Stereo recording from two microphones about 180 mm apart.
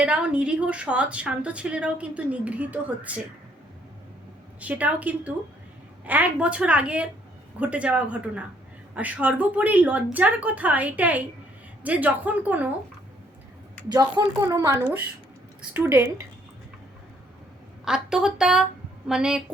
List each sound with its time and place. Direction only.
0.0 s a woman's voice: 5° right (ahead or behind)
4.6 s a woman's voice: 10° right (ahead or behind)
13.8 s a woman's voice: 20° right (ahead or behind)
17.8 s a woman's voice: 5° right (ahead or behind)